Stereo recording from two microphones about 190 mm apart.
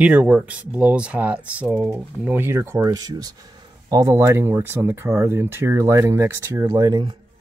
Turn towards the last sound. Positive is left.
turn(degrees=-25)  # may be behind; listen again after turning